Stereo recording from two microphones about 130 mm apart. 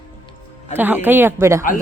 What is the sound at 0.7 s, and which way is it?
Speech, 15° right (ahead or behind).